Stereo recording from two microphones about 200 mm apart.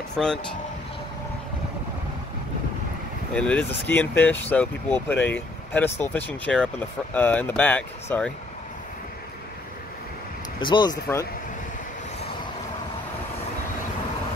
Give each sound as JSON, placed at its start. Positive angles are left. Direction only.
{"t": 0.1, "sound": "speech", "side_deg": 5}
{"t": 3.3, "sound": "speech", "side_deg": 5}
{"t": 10.6, "sound": "speech", "side_deg": 20}